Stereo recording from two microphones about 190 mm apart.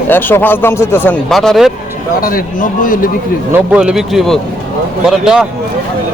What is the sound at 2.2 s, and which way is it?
Speech, 45° left (ahead or behind).